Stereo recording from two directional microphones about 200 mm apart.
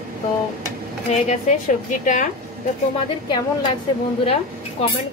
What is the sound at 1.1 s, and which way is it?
A woman's voice, 35° left (ahead or behind).